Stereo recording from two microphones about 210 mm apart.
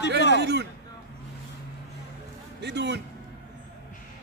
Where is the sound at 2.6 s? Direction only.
55° right (ahead or behind).